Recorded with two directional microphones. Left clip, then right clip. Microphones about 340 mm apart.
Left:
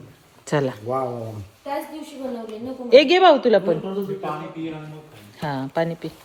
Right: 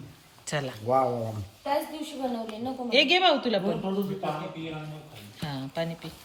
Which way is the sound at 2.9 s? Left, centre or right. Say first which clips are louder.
Left 9 dB; centre.